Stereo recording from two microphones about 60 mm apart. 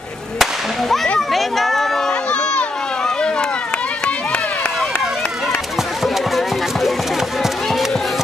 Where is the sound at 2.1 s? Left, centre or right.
Centre.